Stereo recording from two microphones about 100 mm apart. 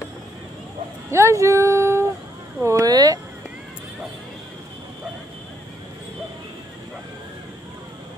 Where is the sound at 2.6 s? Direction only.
35° right (ahead or behind).